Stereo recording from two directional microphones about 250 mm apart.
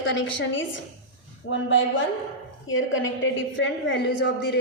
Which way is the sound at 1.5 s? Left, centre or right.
Left.